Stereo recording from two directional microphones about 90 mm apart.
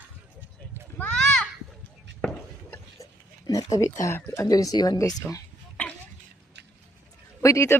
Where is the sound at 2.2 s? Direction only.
10° left (ahead or behind).